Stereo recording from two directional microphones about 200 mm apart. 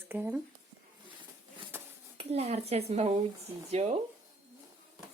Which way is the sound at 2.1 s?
30° right (ahead or behind).